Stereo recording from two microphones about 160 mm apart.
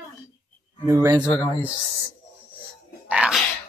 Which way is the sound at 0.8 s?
20° right (ahead or behind).